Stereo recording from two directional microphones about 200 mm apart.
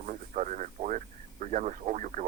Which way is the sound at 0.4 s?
40° right (ahead or behind).